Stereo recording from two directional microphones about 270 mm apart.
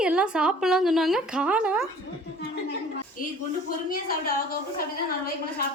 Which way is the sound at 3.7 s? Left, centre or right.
Left.